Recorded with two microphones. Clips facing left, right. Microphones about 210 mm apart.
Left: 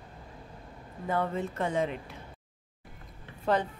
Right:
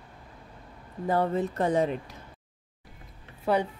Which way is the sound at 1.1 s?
35° right (ahead or behind).